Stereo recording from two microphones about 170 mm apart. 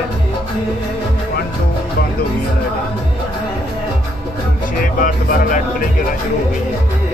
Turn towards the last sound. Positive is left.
turn(degrees=55)  # may be behind; listen again after turning